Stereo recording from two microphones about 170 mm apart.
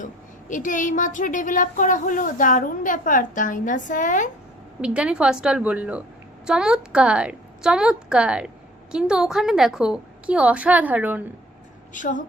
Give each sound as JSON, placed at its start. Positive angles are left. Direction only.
{"t": 0.0, "sound": "a woman's voice", "side_deg": 50}
{"t": 4.8, "sound": "a woman's voice", "side_deg": -5}
{"t": 11.9, "sound": "a woman's voice", "side_deg": 50}